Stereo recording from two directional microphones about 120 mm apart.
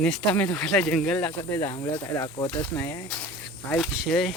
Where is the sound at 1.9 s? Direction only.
15° left (ahead or behind).